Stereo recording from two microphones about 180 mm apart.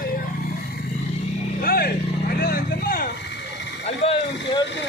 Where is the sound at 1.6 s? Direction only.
55° left (ahead or behind); by 3.7 s 75° left (ahead or behind).